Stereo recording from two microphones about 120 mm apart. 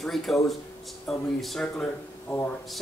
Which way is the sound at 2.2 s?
15° left (ahead or behind).